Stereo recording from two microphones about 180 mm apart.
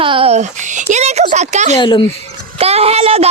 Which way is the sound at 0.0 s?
30° right (ahead or behind).